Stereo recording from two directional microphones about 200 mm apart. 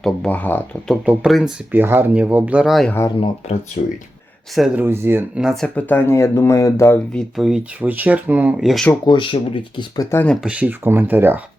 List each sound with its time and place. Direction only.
0.0 s speech: 5° left (ahead or behind)
1.0 s speech: 5° right (ahead or behind)
3.8 s speech: 40° left (ahead or behind)
4.5 s speech: 5° right (ahead or behind)
9.0 s speech: 25° left (ahead or behind)
10.4 s speech: 5° right (ahead or behind)